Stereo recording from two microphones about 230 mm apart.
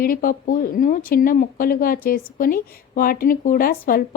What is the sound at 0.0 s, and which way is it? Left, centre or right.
Speech, left.